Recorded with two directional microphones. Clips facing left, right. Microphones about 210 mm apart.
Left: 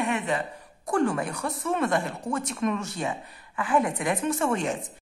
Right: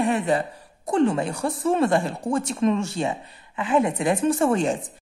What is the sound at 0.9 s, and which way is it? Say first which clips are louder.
A woman's voice: right 4 dB; 25° right (ahead or behind).